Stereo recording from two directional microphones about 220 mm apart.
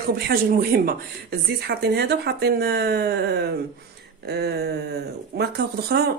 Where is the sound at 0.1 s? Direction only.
45° right (ahead or behind).